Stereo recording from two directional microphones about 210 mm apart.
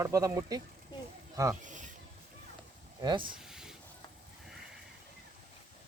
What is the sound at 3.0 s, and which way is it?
Speech, 20° right (ahead or behind).